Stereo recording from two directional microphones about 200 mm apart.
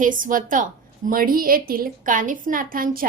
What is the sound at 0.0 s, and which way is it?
A woman's voice, 40° right (ahead or behind).